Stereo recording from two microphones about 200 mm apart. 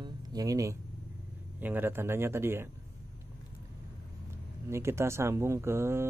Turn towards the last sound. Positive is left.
turn(degrees=-10)  # may be behind; listen again after turning